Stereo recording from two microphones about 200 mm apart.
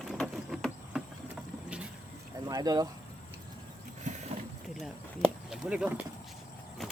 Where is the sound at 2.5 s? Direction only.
20° right (ahead or behind).